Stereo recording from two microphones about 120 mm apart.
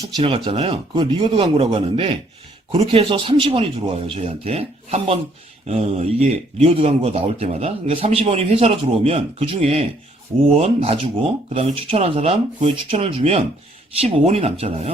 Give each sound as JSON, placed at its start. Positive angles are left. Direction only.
{"t": 0.2, "sound": "a man's voice", "side_deg": -50}